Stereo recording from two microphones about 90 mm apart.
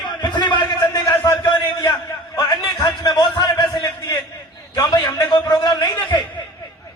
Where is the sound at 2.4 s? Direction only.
50° left (ahead or behind).